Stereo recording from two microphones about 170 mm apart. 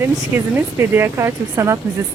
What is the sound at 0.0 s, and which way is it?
Speech, 15° right (ahead or behind).